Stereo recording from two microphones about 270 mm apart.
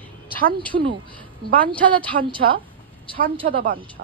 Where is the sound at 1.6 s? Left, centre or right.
Centre.